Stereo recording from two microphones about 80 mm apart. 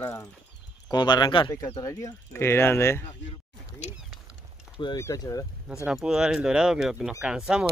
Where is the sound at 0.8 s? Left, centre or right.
Left.